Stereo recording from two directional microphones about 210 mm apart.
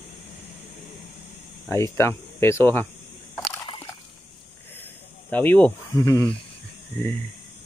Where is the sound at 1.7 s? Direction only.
10° left (ahead or behind).